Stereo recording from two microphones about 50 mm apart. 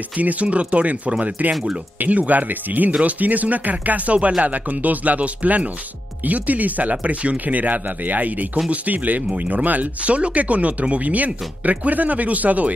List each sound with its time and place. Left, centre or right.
0.2 s speech: right